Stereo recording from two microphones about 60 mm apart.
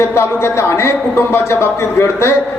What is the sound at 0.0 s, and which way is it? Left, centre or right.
A man's voice, left.